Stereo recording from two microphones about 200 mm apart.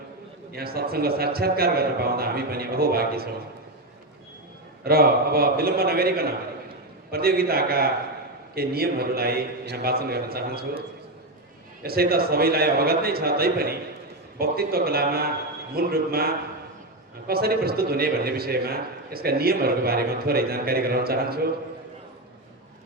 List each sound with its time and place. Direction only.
0.5 s a man's voice: 50° right (ahead or behind)
4.8 s a man's voice: 50° right (ahead or behind)
11.8 s a man's voice: 50° right (ahead or behind)